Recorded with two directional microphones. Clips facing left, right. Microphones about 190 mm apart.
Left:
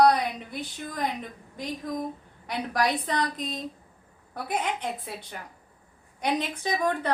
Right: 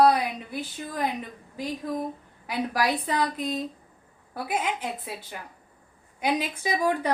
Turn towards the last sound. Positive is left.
turn(degrees=-10)  # may be behind; listen again after turning